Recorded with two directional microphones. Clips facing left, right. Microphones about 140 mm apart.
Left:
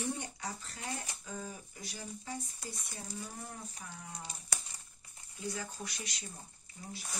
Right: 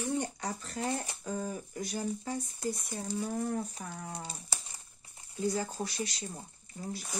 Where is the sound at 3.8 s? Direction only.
50° right (ahead or behind).